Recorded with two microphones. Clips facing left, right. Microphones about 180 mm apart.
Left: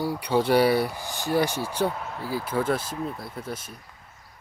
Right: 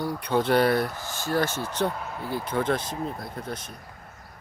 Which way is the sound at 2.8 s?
35° right (ahead or behind).